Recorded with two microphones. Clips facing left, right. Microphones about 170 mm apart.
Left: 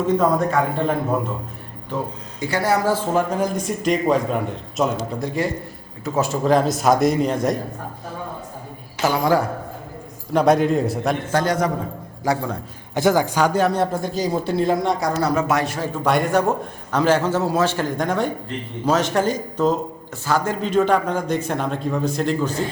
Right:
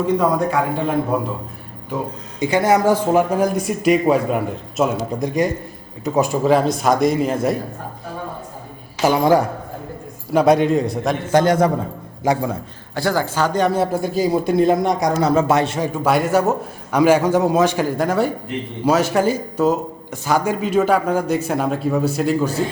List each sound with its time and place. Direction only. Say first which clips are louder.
0.0 s a man's voice: right 1 dB; 10° right (ahead or behind)
2.4 s a man's voice: right 4 dB; 20° right (ahead or behind)
6.5 s a man's voice: left 1 dB; centre (ahead or behind)
9.0 s a man's voice: right 4 dB; 20° right (ahead or behind)
10.3 s a man's voice: right 2 dB; centre (ahead or behind)
11.3 s a man's voice: right 8 dB; 20° right (ahead or behind)
12.9 s a man's voice: left 2 dB; 20° left (ahead or behind); by 15.9 s 25° right (ahead or behind)
16.0 s a man's voice: right 1 dB; 5° right (ahead or behind)